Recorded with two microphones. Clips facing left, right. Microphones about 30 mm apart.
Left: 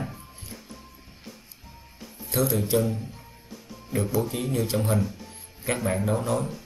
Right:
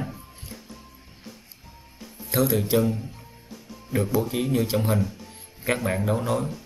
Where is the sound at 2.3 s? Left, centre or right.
Right.